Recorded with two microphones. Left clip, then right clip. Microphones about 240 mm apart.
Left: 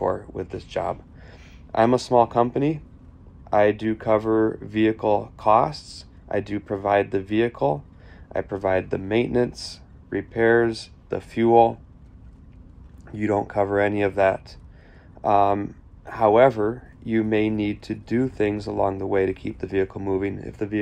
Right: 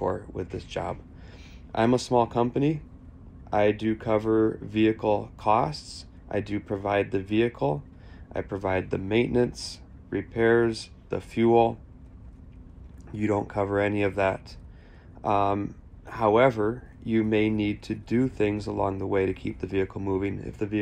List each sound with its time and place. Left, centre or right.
0.0 s speech: left
1.7 s speech: left
3.5 s speech: left
13.1 s speech: left